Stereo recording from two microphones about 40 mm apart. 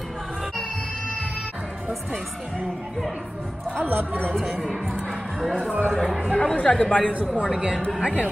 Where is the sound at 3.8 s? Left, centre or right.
Right.